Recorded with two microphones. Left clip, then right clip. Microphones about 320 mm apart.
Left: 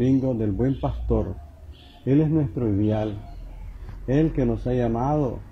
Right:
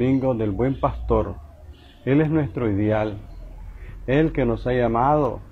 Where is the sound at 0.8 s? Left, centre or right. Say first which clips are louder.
Right 5 dB; right.